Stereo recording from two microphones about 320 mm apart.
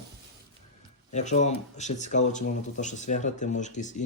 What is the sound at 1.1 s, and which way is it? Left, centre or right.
Speech, left.